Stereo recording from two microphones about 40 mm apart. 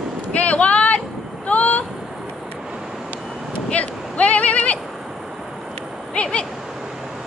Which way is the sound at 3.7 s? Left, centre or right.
Left.